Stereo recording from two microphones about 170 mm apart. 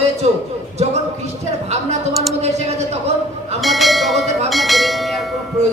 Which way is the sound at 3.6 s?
Centre (ahead or behind).